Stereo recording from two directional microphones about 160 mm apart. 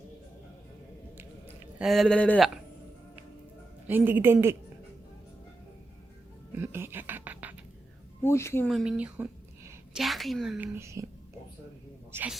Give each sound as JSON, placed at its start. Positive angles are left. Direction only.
{"t": 1.8, "sound": "speech", "side_deg": 0}
{"t": 3.8, "sound": "a woman's voice", "side_deg": -10}
{"t": 6.6, "sound": "music", "side_deg": -15}
{"t": 8.2, "sound": "a woman's voice", "side_deg": 15}
{"t": 8.7, "sound": "a woman's voice", "side_deg": -5}
{"t": 10.6, "sound": "a woman's voice", "side_deg": -15}
{"t": 12.1, "sound": "a woman's voice", "side_deg": -15}